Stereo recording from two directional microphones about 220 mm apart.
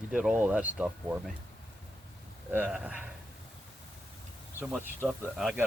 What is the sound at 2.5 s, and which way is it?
Speech, 5° right (ahead or behind).